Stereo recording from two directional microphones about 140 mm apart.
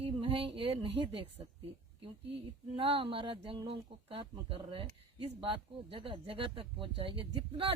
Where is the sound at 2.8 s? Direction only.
40° right (ahead or behind).